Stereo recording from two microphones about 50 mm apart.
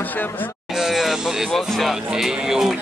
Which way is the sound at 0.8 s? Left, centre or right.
Centre.